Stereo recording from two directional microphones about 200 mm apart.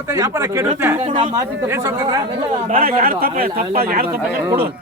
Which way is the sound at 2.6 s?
40° right (ahead or behind).